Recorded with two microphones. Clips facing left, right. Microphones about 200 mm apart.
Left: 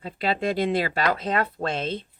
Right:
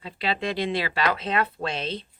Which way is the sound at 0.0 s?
45° left (ahead or behind).